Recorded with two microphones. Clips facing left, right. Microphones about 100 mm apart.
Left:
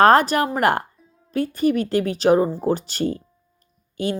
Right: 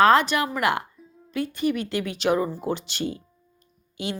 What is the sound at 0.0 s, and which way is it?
Speech, 45° left (ahead or behind).